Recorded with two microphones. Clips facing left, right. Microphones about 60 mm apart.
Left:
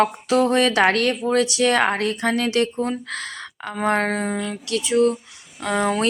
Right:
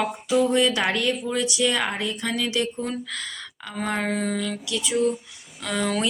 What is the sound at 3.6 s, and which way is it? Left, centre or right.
Speech, left.